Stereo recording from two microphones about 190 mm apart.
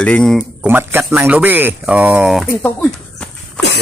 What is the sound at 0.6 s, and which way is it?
Speech, 10° right (ahead or behind).